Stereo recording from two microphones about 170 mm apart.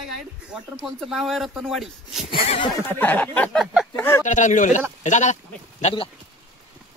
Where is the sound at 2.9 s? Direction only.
10° left (ahead or behind).